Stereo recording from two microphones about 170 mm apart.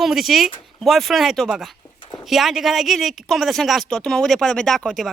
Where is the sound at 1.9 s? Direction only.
30° left (ahead or behind).